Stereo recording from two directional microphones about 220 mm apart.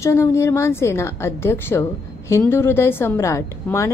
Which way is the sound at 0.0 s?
15° left (ahead or behind).